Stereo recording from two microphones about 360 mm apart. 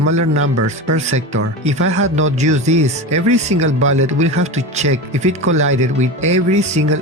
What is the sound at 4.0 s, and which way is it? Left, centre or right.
Speech, centre.